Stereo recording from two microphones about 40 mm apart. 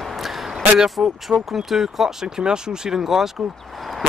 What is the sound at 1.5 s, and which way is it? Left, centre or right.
Speech, centre.